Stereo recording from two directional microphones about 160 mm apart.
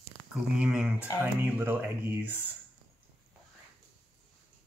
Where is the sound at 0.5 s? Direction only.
5° right (ahead or behind).